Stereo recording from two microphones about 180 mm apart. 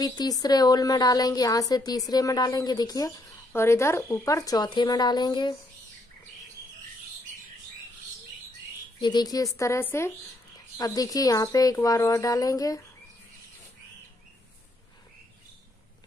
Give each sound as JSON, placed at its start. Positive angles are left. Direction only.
{"t": 0.0, "sound": "speech", "side_deg": 20}
{"t": 9.0, "sound": "a woman's voice", "side_deg": 20}